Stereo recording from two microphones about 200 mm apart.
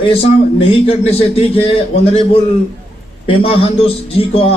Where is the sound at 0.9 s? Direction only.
30° left (ahead or behind).